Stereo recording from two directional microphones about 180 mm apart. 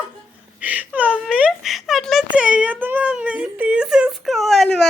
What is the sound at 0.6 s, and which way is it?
Whimper, 10° right (ahead or behind).